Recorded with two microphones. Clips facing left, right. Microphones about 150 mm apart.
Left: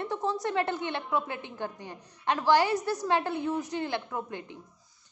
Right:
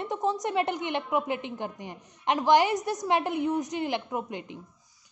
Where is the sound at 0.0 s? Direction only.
20° right (ahead or behind).